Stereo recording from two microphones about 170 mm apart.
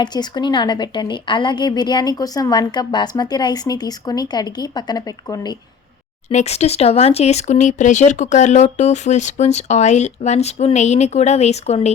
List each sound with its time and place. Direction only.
0.0 s a woman's voice: 25° left (ahead or behind)
6.2 s speech: 40° left (ahead or behind)